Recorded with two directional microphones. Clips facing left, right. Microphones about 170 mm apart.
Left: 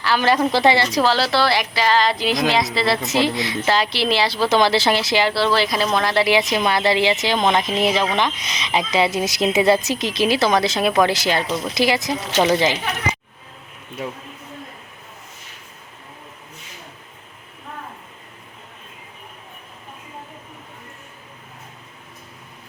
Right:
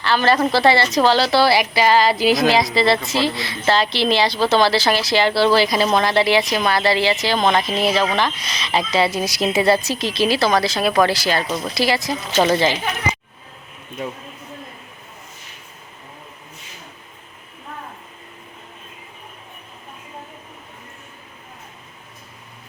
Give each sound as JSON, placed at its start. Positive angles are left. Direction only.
{"t": 0.0, "sound": "a woman's voice", "side_deg": 10}
{"t": 3.0, "sound": "a woman's voice", "side_deg": 20}
{"t": 5.2, "sound": "a woman's voice", "side_deg": 0}
{"t": 6.2, "sound": "a woman's voice", "side_deg": 20}